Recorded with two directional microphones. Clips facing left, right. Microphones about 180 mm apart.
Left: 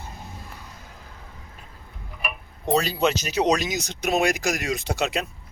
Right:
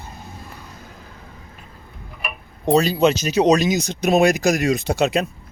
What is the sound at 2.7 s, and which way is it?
Speech, 20° right (ahead or behind).